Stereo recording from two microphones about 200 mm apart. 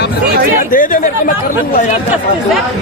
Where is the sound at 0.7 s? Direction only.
45° left (ahead or behind).